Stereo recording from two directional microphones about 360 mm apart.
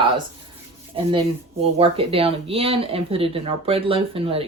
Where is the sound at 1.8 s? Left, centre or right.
Centre.